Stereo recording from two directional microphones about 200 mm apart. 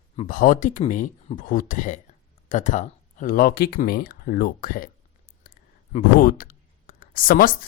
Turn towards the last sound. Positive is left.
turn(degrees=45)  # may be behind; listen again after turning